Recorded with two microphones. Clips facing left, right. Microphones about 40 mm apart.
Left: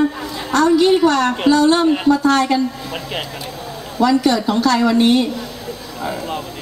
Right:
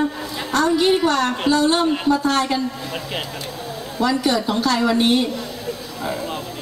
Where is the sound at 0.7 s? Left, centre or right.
Centre.